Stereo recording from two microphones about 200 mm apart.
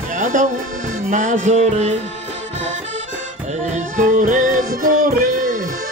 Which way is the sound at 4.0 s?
40° right (ahead or behind).